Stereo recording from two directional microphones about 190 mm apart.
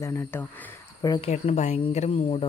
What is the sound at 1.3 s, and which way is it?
Speech, 35° left (ahead or behind).